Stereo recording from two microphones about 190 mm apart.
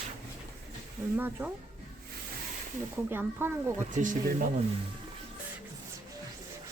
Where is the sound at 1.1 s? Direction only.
10° right (ahead or behind).